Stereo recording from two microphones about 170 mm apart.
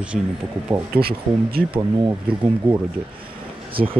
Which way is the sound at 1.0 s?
65° right (ahead or behind).